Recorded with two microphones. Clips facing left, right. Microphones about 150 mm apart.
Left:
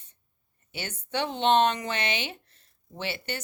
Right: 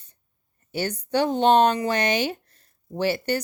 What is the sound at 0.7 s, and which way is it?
Speech, 40° right (ahead or behind).